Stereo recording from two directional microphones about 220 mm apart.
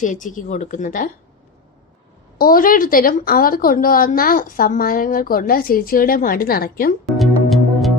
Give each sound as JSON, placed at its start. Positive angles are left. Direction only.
{"t": 0.0, "sound": "speech", "side_deg": 35}
{"t": 2.4, "sound": "speech", "side_deg": 40}
{"t": 7.0, "sound": "music", "side_deg": 0}